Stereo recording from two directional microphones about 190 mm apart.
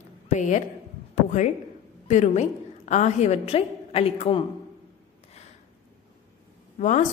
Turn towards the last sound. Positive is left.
turn(degrees=40)  # may be behind; listen again after turning